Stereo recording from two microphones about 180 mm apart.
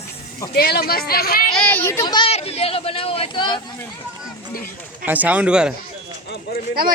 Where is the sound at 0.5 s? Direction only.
60° left (ahead or behind).